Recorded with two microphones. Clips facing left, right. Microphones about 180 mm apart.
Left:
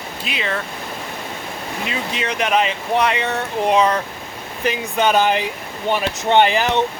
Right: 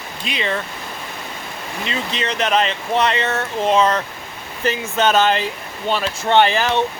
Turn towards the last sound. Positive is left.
turn(degrees=15)  # may be behind; listen again after turning